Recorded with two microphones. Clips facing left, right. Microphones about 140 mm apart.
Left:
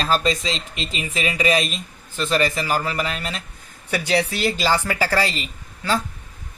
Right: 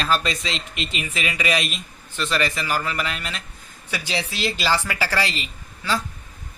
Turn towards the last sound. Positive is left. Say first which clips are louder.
# left 2 dB
turn(degrees=45)  # may be behind; listen again after turning